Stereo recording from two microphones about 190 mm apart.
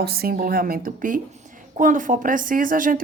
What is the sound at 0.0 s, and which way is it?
A woman's voice, 55° right (ahead or behind).